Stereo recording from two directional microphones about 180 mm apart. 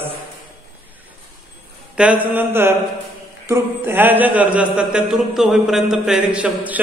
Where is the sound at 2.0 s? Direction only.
10° right (ahead or behind).